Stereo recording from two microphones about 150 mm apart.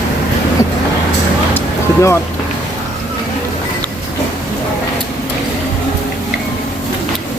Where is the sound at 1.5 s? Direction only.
20° left (ahead or behind).